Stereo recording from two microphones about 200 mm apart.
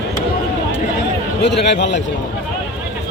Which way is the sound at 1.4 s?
60° left (ahead or behind).